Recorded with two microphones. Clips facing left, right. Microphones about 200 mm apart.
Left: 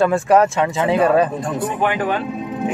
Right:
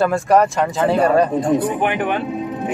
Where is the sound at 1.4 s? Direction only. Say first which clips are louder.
Right 3 dB; 20° right (ahead or behind).